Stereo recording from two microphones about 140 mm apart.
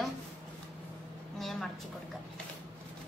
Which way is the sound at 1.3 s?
Centre (ahead or behind).